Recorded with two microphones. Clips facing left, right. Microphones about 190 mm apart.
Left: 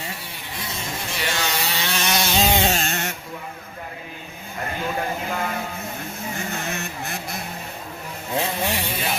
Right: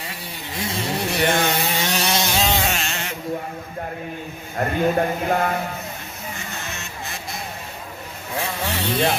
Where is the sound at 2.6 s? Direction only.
35° left (ahead or behind).